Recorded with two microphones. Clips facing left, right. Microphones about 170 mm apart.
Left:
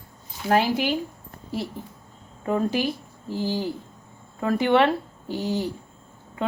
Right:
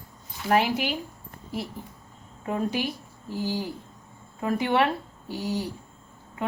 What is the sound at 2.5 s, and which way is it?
Speech, 30° left (ahead or behind).